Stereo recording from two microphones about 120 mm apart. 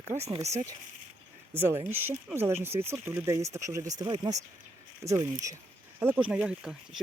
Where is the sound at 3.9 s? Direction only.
35° right (ahead or behind).